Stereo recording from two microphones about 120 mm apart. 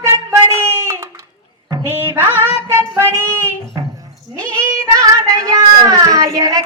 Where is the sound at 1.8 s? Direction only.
20° right (ahead or behind).